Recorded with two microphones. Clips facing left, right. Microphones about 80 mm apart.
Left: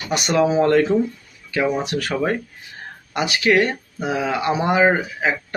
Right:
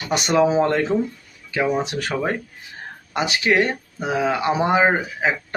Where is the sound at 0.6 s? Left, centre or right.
Centre.